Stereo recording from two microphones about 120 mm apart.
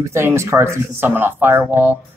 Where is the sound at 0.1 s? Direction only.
20° right (ahead or behind).